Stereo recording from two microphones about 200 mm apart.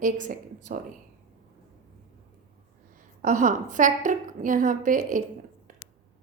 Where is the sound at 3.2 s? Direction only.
40° right (ahead or behind).